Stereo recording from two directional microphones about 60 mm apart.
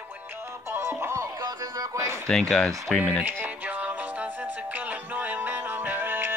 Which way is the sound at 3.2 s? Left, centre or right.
Right.